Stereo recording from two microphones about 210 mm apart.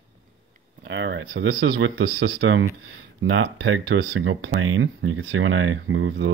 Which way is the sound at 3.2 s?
65° right (ahead or behind).